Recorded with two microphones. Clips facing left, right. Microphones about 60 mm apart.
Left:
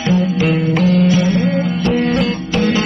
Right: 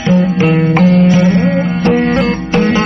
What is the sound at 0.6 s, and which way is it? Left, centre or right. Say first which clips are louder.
Music: right 5 dB; right.